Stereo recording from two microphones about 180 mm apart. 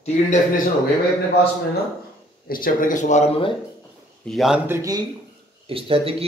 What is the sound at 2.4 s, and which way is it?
Speech, 50° left (ahead or behind).